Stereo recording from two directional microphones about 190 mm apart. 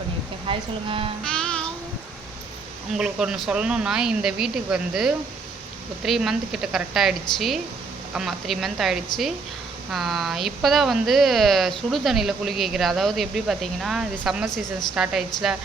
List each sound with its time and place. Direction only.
0.4 s speech: 25° right (ahead or behind)
1.2 s music: 5° left (ahead or behind)
2.9 s speech: 5° right (ahead or behind)